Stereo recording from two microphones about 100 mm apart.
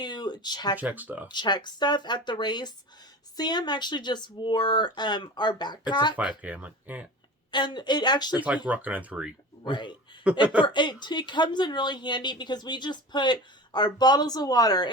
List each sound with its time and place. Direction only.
0.0 s speech: 45° left (ahead or behind)
0.8 s speech: 15° right (ahead or behind)
1.3 s a woman's voice: 50° left (ahead or behind)
6.1 s speech: 15° right (ahead or behind)
7.5 s a woman's voice: 50° left (ahead or behind)
8.6 s speech: 15° right (ahead or behind)
9.6 s a woman's voice: 50° left (ahead or behind)
10.3 s speech: 15° right (ahead or behind)
10.6 s a woman's voice: 50° left (ahead or behind)